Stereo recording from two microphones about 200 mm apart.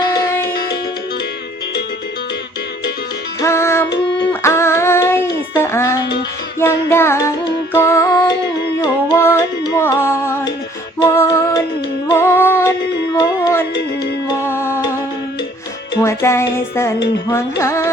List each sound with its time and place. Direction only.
0.4 s music: 50° left (ahead or behind)
3.4 s music: 15° left (ahead or behind)
4.3 s child singing: 15° left (ahead or behind)
6.6 s music: 10° left (ahead or behind)
16.0 s music: 15° left (ahead or behind)